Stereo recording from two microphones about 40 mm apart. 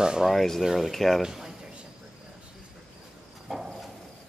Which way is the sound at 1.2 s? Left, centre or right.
Centre.